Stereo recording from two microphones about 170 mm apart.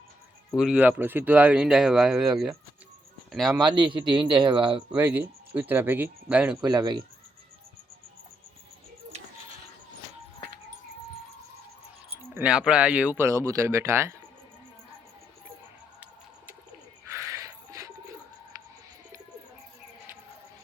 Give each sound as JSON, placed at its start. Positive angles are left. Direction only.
{"t": 0.5, "sound": "speech", "side_deg": -5}
{"t": 3.6, "sound": "a man's voice", "side_deg": -25}
{"t": 4.9, "sound": "speech", "side_deg": -10}
{"t": 6.6, "sound": "a man's voice", "side_deg": -25}
{"t": 9.1, "sound": "a sound", "side_deg": -40}
{"t": 12.3, "sound": "speech", "side_deg": -5}
{"t": 17.1, "sound": "music", "side_deg": -15}